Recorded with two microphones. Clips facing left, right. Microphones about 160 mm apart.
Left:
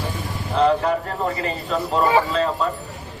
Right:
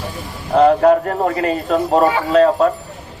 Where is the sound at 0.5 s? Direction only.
50° right (ahead or behind).